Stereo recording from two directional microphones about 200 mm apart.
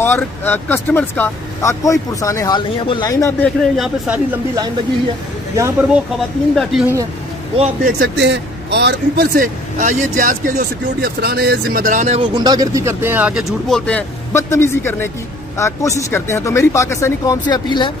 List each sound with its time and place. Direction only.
0.0 s speech: 10° left (ahead or behind)
6.5 s speech: centre (ahead or behind)
7.5 s speech: 30° right (ahead or behind)
8.0 s speech: 60° right (ahead or behind); by 12.2 s 40° right (ahead or behind)
12.2 s speech: 20° right (ahead or behind); by 17.9 s 20° left (ahead or behind)